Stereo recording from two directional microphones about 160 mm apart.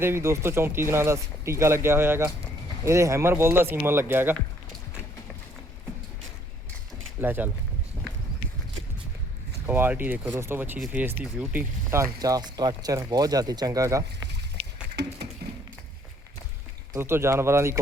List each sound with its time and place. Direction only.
0.0 s speech: 15° right (ahead or behind)
7.2 s speech: 10° right (ahead or behind)
9.6 s speech: 15° right (ahead or behind)
12.2 s speech: 25° right (ahead or behind)
15.0 s a sound: 90° right
16.9 s speech: 15° right (ahead or behind)